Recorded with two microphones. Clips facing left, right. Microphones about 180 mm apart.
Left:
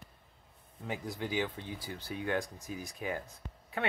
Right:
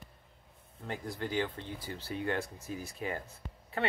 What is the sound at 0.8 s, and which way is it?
Speech, 5° left (ahead or behind).